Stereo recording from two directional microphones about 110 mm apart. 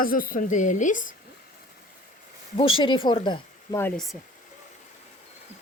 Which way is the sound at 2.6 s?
50° left (ahead or behind).